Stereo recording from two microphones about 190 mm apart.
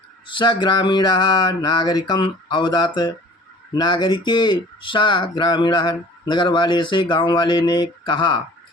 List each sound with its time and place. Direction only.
0.3 s speech: 25° left (ahead or behind)